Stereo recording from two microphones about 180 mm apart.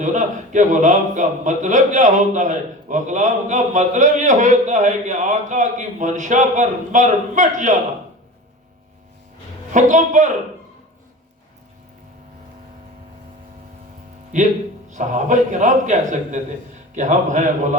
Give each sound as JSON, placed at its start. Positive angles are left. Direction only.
{"t": 0.0, "sound": "a man's voice", "side_deg": -45}
{"t": 9.7, "sound": "a man's voice", "side_deg": -45}
{"t": 14.3, "sound": "a man's voice", "side_deg": -45}